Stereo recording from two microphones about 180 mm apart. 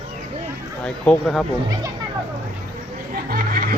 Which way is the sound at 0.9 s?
Centre (ahead or behind).